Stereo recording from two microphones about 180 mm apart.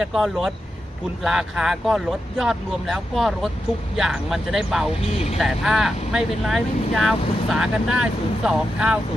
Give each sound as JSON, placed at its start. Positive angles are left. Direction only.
{"t": 0.0, "sound": "speech", "side_deg": 0}
{"t": 5.1, "sound": "speech", "side_deg": 35}
{"t": 5.4, "sound": "speech", "side_deg": 0}